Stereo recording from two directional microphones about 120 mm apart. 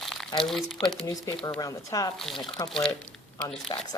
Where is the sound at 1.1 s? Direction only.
30° left (ahead or behind).